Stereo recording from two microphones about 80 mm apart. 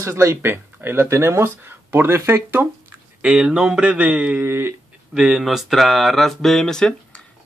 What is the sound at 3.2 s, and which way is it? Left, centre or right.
Speech, centre.